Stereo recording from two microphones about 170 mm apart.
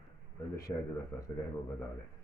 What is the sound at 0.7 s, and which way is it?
Speech, 25° left (ahead or behind).